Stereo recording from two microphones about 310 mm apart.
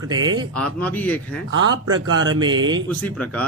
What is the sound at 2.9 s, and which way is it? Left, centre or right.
Speech, centre.